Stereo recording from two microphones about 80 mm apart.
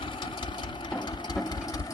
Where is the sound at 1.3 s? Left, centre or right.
Left.